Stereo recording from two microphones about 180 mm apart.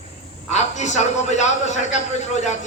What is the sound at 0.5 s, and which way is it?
A man's voice, 40° left (ahead or behind).